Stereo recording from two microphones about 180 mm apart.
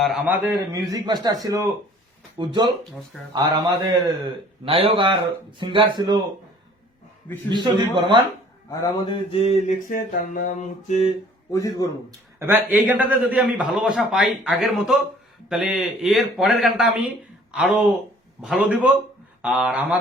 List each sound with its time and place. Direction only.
0.0 s a man's voice: 5° right (ahead or behind)
0.9 s speech: 25° right (ahead or behind)
7.5 s speech: 25° right (ahead or behind)
8.7 s a sound: 20° left (ahead or behind)
9.7 s a sound: 50° left (ahead or behind)
10.8 s mantra: 40° left (ahead or behind)
11.5 s a man's voice: 20° left (ahead or behind)
12.4 s a man's voice: 10° right (ahead or behind)